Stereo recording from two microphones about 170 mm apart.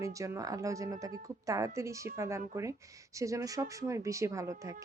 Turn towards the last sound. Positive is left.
turn(degrees=-20)  # may be behind; listen again after turning